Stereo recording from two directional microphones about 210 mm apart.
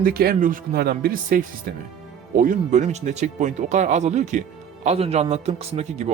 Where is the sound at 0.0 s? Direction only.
45° right (ahead or behind).